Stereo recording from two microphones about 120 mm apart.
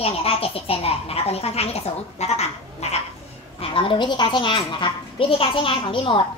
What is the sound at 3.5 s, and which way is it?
A woman's voice, 50° left (ahead or behind).